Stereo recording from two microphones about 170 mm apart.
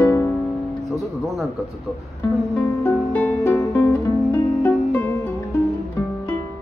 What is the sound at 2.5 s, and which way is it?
Music, 20° left (ahead or behind).